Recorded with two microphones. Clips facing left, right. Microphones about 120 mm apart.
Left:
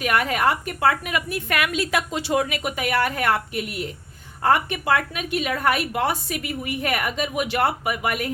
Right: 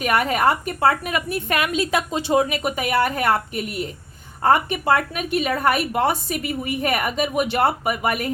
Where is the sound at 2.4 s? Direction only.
35° right (ahead or behind).